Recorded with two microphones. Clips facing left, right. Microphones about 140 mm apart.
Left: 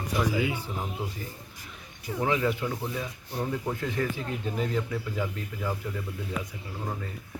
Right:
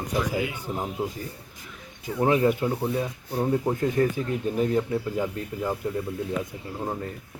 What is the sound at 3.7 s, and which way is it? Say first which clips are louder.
Speech: right 7 dB; 40° right (ahead or behind).